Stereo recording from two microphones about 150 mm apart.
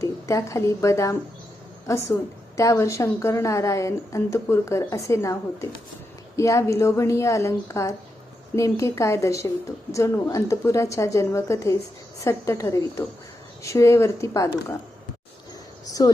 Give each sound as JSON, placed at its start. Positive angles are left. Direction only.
{"t": 0.0, "sound": "a woman's voice", "side_deg": 20}
{"t": 16.0, "sound": "a woman's voice", "side_deg": 25}